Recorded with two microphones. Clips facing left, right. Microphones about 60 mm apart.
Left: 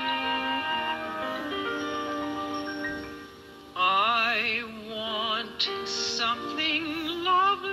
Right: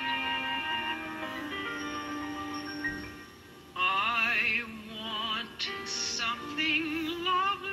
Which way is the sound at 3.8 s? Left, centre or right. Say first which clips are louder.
Left 6 dB; left.